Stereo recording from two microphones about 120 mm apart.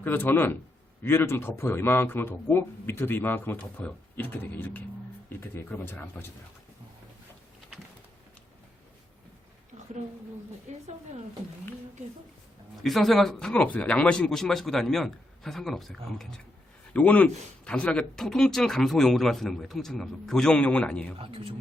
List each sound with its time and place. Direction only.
0.0 s a man's voice: 15° left (ahead or behind)
10.7 s speech: 75° right (ahead or behind)
12.8 s speech: centre (ahead or behind)
21.2 s speech: 50° right (ahead or behind)